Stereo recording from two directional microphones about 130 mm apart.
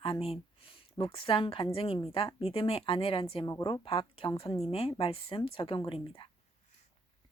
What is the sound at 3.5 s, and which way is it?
Speech, 30° left (ahead or behind).